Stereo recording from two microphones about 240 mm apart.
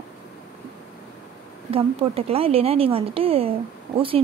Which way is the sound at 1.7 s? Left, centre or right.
Right.